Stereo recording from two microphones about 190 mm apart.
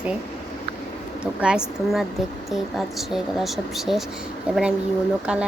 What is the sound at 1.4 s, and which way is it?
A woman's voice, 5° right (ahead or behind).